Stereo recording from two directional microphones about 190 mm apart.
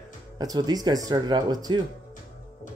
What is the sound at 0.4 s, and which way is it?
Speech, 20° right (ahead or behind).